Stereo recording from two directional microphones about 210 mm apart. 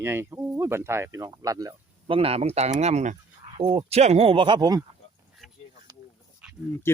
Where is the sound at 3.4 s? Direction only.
30° right (ahead or behind).